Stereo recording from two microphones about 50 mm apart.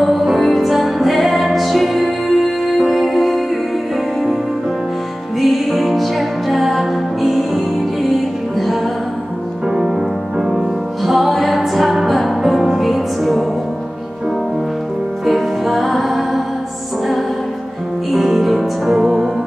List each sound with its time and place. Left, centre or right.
0.0 s music: centre
5.4 s music: centre
9.7 s music: centre
15.2 s music: centre
18.1 s music: centre